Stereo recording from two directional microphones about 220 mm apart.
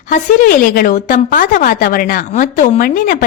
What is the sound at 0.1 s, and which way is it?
A woman's voice, 40° left (ahead or behind).